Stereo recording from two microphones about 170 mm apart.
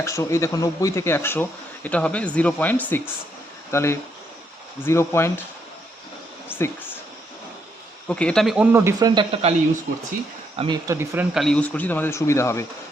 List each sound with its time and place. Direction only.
0.0 s speech: 15° left (ahead or behind)
8.0 s speech: 5° left (ahead or behind); by 9.2 s 20° right (ahead or behind)
9.3 s speech: 40° right (ahead or behind)
10.6 s speech: 25° right (ahead or behind)
10.9 s speech: 15° right (ahead or behind)
11.3 s speech: 5° left (ahead or behind)